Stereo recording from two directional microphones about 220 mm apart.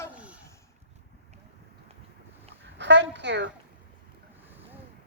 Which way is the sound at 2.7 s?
55° right (ahead or behind).